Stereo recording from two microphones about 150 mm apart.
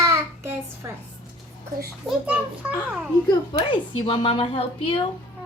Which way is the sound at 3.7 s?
35° left (ahead or behind).